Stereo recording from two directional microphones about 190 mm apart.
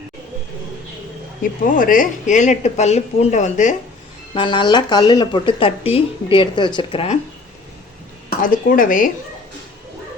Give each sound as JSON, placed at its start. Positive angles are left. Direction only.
{"t": 1.4, "sound": "speech", "side_deg": 45}
{"t": 4.4, "sound": "speech", "side_deg": 25}
{"t": 8.4, "sound": "speech", "side_deg": 45}